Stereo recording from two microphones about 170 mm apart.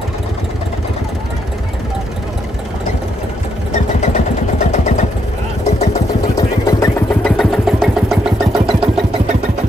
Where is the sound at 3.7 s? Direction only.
40° left (ahead or behind).